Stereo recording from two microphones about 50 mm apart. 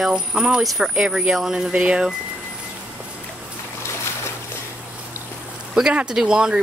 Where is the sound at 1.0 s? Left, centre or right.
Centre.